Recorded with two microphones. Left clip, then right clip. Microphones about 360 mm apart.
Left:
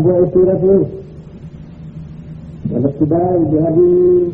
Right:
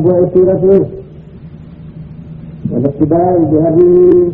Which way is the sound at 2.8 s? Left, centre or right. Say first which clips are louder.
Right 4 dB; right.